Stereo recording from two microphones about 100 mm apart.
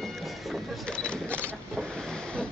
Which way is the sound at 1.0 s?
10° left (ahead or behind).